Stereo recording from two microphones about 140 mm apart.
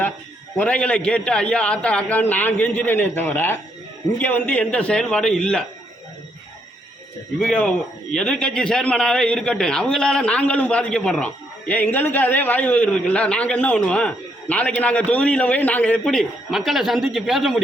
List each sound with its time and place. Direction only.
0.5 s a man's voice: 10° left (ahead or behind)
7.3 s a man's voice: 5° left (ahead or behind)